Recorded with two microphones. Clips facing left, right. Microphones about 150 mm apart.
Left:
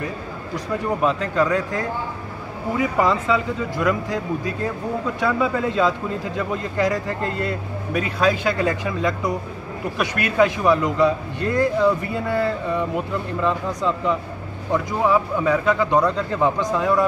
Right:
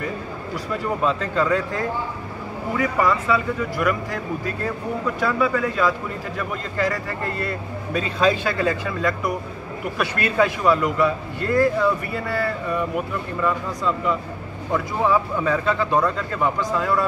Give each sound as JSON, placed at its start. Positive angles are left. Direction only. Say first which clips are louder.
{"t": 1.0, "sound": "a man's voice", "louder": "left 1 dB", "side_deg": 15}
{"t": 2.8, "sound": "a man's voice", "louder": "left 1 dB", "side_deg": 20}